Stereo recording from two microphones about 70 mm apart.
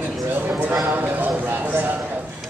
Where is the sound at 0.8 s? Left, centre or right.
Right.